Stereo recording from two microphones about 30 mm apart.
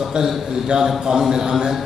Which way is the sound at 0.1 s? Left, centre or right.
Right.